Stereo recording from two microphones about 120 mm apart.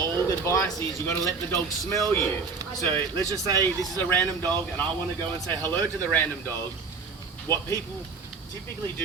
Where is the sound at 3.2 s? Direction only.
30° right (ahead or behind).